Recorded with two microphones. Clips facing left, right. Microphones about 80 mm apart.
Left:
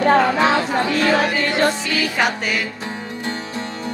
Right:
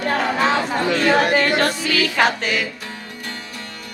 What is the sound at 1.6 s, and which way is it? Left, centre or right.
Music, centre.